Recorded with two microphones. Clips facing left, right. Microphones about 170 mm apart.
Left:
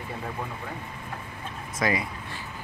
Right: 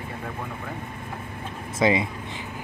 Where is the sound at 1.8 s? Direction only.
25° right (ahead or behind).